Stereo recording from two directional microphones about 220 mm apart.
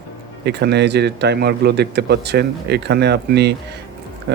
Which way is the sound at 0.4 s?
50° right (ahead or behind).